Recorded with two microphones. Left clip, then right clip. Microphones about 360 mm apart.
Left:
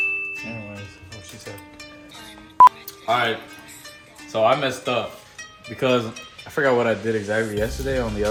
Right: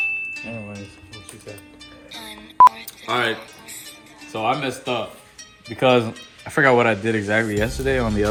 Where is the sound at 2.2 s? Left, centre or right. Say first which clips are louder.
Even; centre.